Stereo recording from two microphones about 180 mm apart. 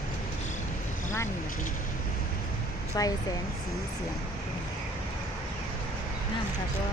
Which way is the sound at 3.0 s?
20° left (ahead or behind).